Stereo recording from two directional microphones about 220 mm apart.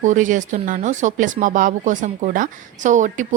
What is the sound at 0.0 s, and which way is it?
A woman's voice, 35° right (ahead or behind).